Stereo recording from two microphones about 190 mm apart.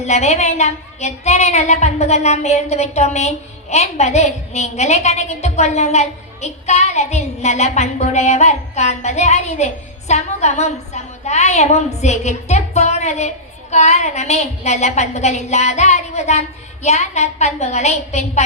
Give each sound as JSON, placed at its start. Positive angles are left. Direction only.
{"t": 0.0, "sound": "a woman's voice", "side_deg": 35}